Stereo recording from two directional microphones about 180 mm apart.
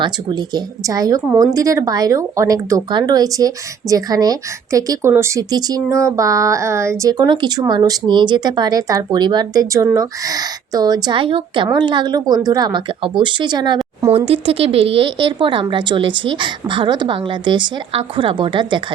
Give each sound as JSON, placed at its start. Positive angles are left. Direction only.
{"t": 0.0, "sound": "speech", "side_deg": -25}